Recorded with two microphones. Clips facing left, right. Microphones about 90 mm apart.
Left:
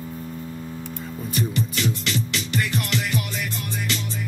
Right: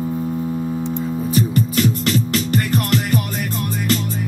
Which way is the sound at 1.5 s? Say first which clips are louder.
Right 7 dB; 45° right (ahead or behind).